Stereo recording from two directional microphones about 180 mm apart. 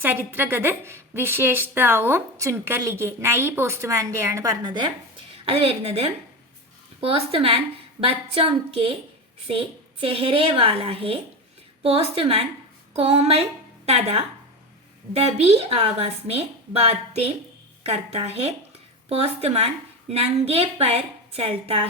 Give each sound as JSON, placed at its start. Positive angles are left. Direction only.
{"t": 0.0, "sound": "a woman's voice", "side_deg": -10}